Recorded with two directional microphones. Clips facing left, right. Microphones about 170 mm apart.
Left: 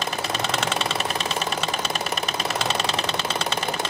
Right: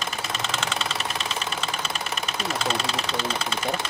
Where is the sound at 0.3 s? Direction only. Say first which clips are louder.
Left 4 dB; 40° left (ahead or behind).